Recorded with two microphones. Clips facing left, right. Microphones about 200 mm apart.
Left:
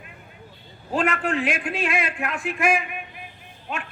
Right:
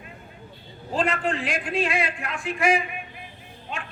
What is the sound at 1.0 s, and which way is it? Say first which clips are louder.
Speech: left 1 dB; 60° left (ahead or behind).